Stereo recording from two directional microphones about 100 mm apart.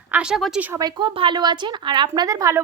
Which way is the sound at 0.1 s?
10° right (ahead or behind).